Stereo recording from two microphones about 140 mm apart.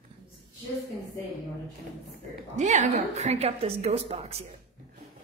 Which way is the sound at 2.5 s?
60° right (ahead or behind).